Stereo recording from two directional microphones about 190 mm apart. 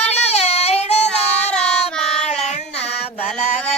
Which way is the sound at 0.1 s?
35° left (ahead or behind).